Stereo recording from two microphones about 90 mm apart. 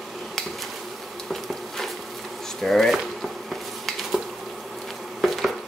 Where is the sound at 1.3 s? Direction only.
Centre (ahead or behind).